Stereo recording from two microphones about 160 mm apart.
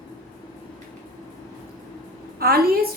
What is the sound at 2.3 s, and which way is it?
Speech, 70° right (ahead or behind).